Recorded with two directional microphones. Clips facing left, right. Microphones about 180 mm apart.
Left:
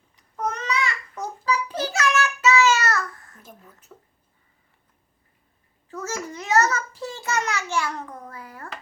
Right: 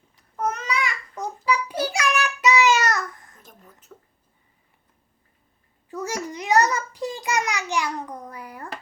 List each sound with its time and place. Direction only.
0.3 s babbling: 10° right (ahead or behind)
1.5 s child singing: 10° right (ahead or behind)
5.9 s a sound: 15° right (ahead or behind)